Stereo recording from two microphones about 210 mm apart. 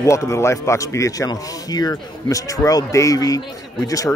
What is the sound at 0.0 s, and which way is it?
A man's voice, 15° left (ahead or behind).